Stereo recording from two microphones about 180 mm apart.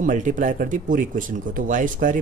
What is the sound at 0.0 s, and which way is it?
Speech, 45° right (ahead or behind).